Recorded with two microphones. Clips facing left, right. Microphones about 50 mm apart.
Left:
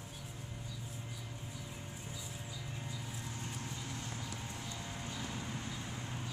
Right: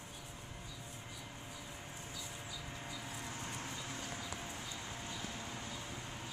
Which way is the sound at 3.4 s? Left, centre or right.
Right.